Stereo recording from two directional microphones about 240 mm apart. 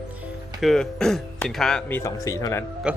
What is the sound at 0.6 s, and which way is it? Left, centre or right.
Speech, centre.